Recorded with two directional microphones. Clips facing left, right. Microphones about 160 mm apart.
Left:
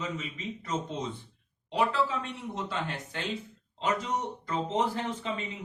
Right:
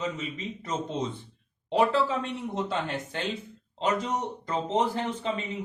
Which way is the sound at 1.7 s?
30° right (ahead or behind).